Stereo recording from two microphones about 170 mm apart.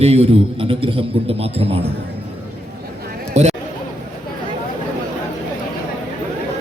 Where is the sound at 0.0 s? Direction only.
35° right (ahead or behind).